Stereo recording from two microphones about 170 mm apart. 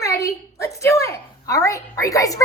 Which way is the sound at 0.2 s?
20° left (ahead or behind).